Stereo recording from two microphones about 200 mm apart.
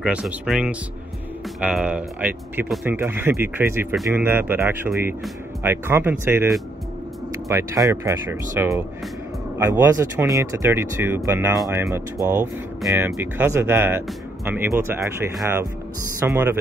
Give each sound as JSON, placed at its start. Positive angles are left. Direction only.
{"t": 0.0, "sound": "speech", "side_deg": -5}
{"t": 7.4, "sound": "speech", "side_deg": -15}
{"t": 11.5, "sound": "speech", "side_deg": 0}
{"t": 16.2, "sound": "speech", "side_deg": -10}